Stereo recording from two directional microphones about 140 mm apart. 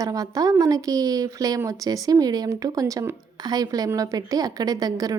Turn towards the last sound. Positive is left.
turn(degrees=-25)  # may be behind; listen again after turning